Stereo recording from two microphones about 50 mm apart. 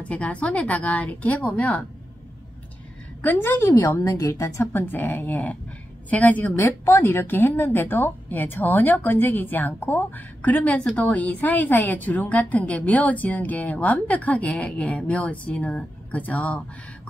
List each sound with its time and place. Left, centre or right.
0.0 s a woman's voice: left
3.3 s a woman's voice: left
4.2 s speech: left
4.7 s speech: left
6.5 s a woman's voice: left